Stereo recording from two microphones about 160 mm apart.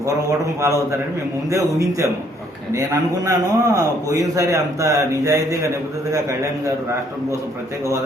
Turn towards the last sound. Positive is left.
turn(degrees=-20)  # may be behind; listen again after turning